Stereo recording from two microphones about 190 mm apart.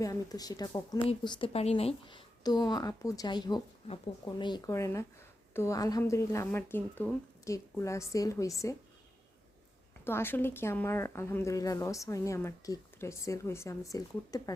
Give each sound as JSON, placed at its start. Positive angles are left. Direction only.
{"t": 0.0, "sound": "a woman's voice", "side_deg": 20}
{"t": 10.0, "sound": "a woman's voice", "side_deg": 10}